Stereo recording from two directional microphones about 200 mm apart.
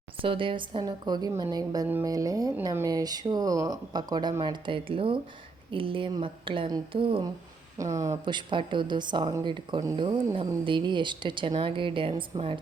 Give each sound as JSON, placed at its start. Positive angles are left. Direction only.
{"t": 0.2, "sound": "a woman's voice", "side_deg": -25}